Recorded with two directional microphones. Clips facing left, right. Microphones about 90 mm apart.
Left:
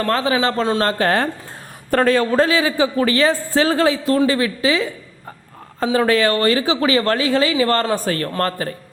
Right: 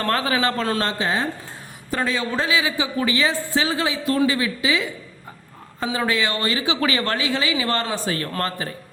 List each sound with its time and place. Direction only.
0.0 s a man's voice: 25° left (ahead or behind)
0.9 s a man's voice: 55° left (ahead or behind)